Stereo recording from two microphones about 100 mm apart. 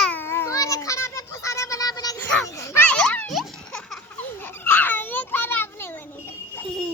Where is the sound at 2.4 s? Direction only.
35° left (ahead or behind).